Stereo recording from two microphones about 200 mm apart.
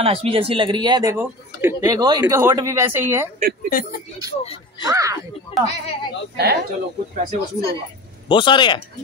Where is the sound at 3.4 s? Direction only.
45° right (ahead or behind).